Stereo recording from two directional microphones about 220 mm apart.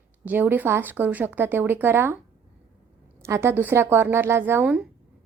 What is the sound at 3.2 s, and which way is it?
Speech, 10° right (ahead or behind).